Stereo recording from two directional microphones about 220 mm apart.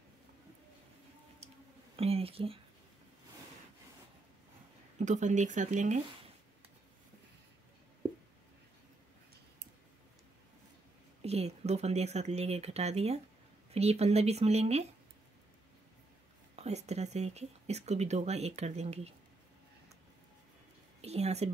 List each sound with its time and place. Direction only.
1.4 s a sound: 30° right (ahead or behind)
2.0 s speech: 25° right (ahead or behind)
4.9 s speech: 35° right (ahead or behind)
11.2 s speech: 30° right (ahead or behind)
16.5 s speech: 30° right (ahead or behind)
21.0 s speech: 30° right (ahead or behind)